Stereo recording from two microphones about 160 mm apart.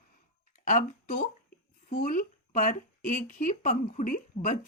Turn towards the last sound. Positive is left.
turn(degrees=55)  # may be behind; listen again after turning